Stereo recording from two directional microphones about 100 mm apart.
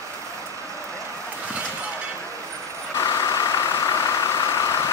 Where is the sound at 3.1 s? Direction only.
35° left (ahead or behind).